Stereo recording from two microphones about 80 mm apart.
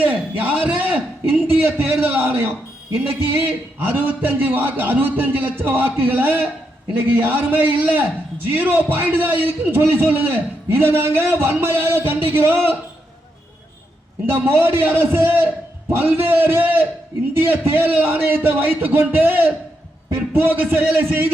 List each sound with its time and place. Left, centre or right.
0.0 s a man's voice: right
14.3 s a man's voice: right